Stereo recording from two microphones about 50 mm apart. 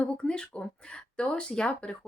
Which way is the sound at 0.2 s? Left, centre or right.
Centre.